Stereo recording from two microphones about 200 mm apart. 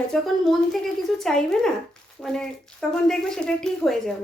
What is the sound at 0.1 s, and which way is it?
A woman's voice, centre (ahead or behind).